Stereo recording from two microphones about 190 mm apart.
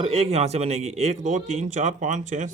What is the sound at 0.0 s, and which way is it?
A man's voice, 30° right (ahead or behind).